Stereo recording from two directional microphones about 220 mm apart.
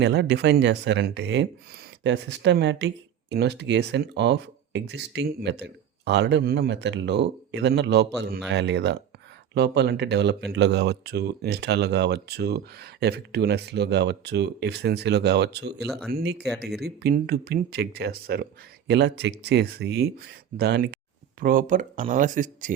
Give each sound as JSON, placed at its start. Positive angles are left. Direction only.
{"t": 0.0, "sound": "speech", "side_deg": -50}
{"t": 15.9, "sound": "speech", "side_deg": 0}
{"t": 16.1, "sound": "speech", "side_deg": -50}